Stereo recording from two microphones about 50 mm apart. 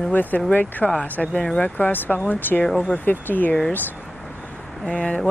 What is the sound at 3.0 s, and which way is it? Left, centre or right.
Speech, left.